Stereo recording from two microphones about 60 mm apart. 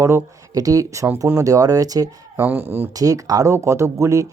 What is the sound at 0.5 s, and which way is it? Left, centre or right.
Speech, right.